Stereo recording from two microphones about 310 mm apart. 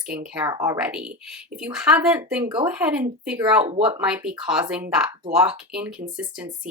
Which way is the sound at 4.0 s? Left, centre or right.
Centre.